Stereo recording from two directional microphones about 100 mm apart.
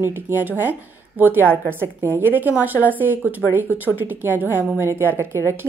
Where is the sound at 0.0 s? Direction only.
20° right (ahead or behind).